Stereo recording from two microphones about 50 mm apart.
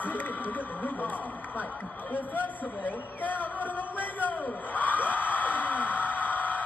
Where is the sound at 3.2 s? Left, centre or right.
Left.